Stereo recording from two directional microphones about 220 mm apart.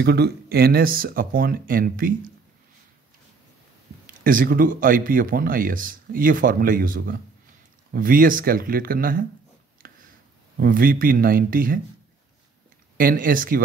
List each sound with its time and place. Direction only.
0.0 s speech: 45° right (ahead or behind)
4.2 s speech: 40° right (ahead or behind)
9.8 s a sound: 40° right (ahead or behind)
10.6 s speech: 40° right (ahead or behind)
12.9 s speech: 40° right (ahead or behind)